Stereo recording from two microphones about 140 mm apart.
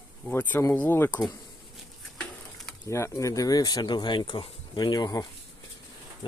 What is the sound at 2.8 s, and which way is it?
Speech, 20° left (ahead or behind).